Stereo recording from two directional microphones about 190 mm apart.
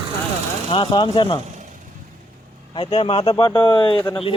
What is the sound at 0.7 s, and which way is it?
Speech, 25° left (ahead or behind).